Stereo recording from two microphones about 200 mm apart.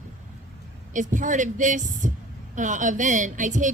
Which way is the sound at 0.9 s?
40° right (ahead or behind).